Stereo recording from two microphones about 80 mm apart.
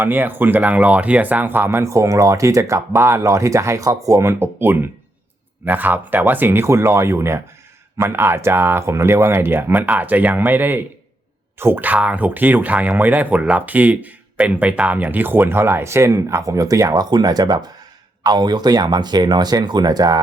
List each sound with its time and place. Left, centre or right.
0.0 s speech: right